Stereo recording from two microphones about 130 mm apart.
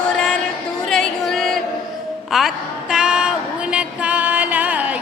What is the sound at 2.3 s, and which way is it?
A woman's voice, centre (ahead or behind).